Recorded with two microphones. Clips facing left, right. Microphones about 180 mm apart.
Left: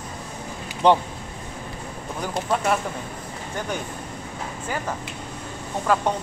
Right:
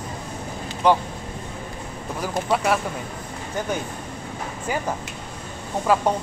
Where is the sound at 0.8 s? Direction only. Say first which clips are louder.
Left 1 dB; 30° left (ahead or behind).